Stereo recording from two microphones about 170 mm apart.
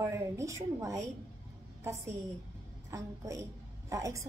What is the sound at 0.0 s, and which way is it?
A woman's voice, 15° right (ahead or behind).